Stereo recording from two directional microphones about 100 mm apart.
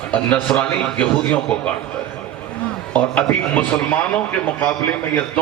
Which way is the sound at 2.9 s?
15° left (ahead or behind).